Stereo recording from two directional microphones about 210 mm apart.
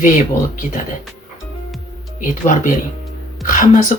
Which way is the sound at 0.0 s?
35° left (ahead or behind).